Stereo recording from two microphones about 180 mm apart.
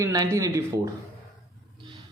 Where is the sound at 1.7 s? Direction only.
25° right (ahead or behind).